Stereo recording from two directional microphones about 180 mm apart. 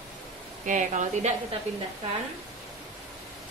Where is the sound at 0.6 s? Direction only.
45° right (ahead or behind).